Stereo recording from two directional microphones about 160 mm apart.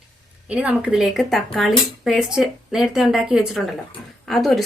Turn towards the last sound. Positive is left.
turn(degrees=0)  # may be behind; listen again after turning